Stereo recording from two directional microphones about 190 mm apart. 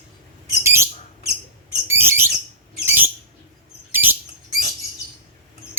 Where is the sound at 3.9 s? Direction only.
10° right (ahead or behind).